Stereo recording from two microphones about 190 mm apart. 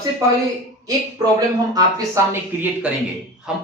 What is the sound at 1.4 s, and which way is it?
Speech, 20° right (ahead or behind).